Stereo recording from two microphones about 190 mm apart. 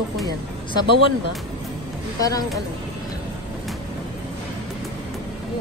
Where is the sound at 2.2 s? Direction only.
20° left (ahead or behind).